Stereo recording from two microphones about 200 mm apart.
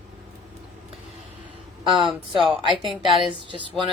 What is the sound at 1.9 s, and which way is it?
Speech, 25° right (ahead or behind).